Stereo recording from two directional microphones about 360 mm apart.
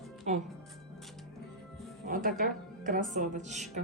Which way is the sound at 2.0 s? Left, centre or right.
Right.